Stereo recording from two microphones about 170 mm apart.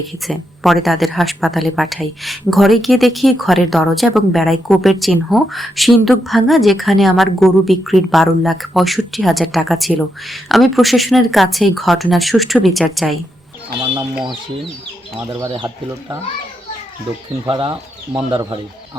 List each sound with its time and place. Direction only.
0.3 s a woman's voice: centre (ahead or behind)
15.2 s speech: 25° right (ahead or behind)
17.5 s speech: 30° right (ahead or behind)